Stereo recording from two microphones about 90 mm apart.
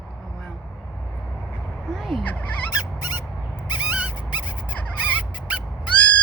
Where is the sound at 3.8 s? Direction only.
15° right (ahead or behind).